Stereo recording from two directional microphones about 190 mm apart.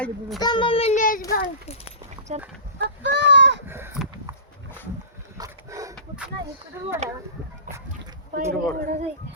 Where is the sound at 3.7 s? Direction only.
10° right (ahead or behind).